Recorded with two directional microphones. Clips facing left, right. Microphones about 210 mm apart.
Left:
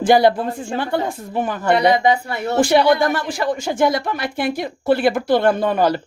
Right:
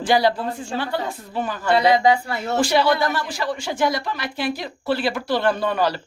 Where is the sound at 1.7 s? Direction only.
20° left (ahead or behind).